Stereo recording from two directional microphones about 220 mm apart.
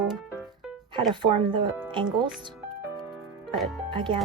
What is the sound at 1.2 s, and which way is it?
Speech, 20° right (ahead or behind).